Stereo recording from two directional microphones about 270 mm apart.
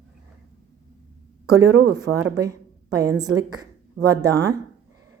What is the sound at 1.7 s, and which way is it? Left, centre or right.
Speech, right.